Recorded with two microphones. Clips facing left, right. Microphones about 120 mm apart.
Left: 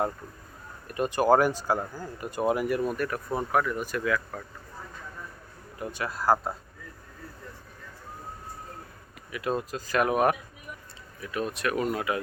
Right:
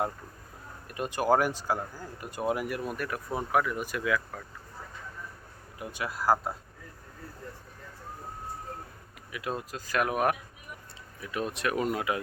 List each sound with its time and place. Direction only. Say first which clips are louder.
0.9 s speech: left 4 dB; centre (ahead or behind)
5.8 s speech: left 2 dB; 10° right (ahead or behind)
9.3 s speech: left 5 dB; 5° right (ahead or behind)
11.2 s speech: left 2 dB; 20° right (ahead or behind)